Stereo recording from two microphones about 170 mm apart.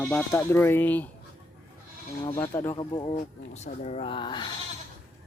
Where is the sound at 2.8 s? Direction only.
30° left (ahead or behind).